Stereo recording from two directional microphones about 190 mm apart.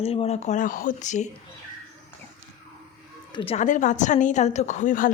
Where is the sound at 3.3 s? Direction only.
30° left (ahead or behind).